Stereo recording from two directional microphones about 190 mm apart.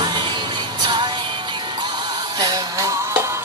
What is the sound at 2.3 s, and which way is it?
Music, 20° right (ahead or behind).